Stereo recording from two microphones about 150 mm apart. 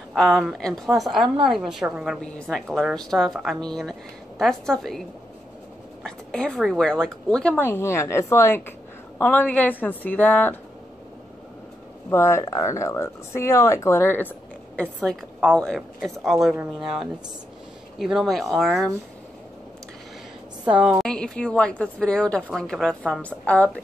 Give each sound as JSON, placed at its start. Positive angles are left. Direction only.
{"t": 0.1, "sound": "a woman's voice", "side_deg": 0}
{"t": 6.0, "sound": "a woman's voice", "side_deg": 5}
{"t": 12.1, "sound": "a woman's voice", "side_deg": 20}
{"t": 20.7, "sound": "a woman's voice", "side_deg": -5}
{"t": 21.1, "sound": "a woman's voice", "side_deg": 5}